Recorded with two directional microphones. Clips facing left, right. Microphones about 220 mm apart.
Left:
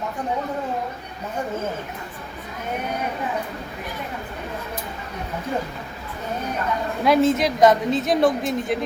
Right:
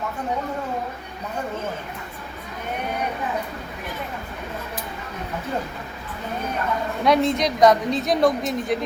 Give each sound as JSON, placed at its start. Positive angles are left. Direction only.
{"t": 7.0, "sound": "a woman's voice", "side_deg": 5}